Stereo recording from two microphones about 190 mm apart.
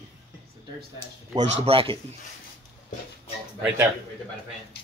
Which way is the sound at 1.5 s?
30° right (ahead or behind).